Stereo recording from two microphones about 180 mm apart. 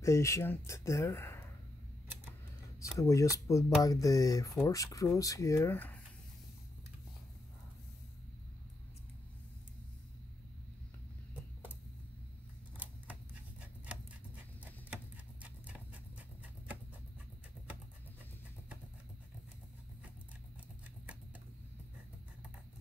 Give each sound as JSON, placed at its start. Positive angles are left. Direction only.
{"t": 0.0, "sound": "speech", "side_deg": 15}
{"t": 3.0, "sound": "speech", "side_deg": 15}
{"t": 12.7, "sound": "typewriter", "side_deg": -10}
{"t": 15.6, "sound": "horse", "side_deg": -10}